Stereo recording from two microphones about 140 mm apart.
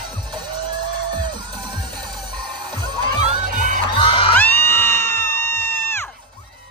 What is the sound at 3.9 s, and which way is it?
Music, 40° left (ahead or behind).